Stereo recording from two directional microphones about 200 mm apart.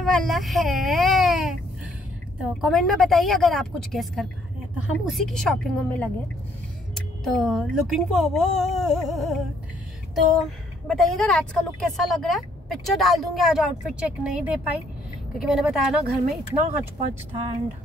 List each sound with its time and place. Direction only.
0.0 s baby cry: centre (ahead or behind)
2.6 s a woman's voice: centre (ahead or behind)
7.2 s a woman's voice: centre (ahead or behind)
17.3 s speech: 30° right (ahead or behind)